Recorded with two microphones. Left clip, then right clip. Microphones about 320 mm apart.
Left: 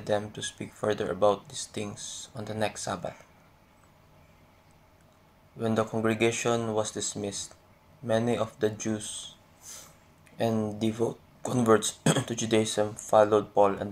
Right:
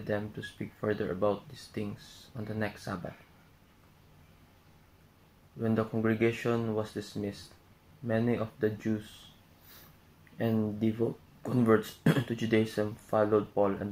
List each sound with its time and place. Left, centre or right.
0.0 s speech: left
5.6 s speech: left
10.3 s speech: left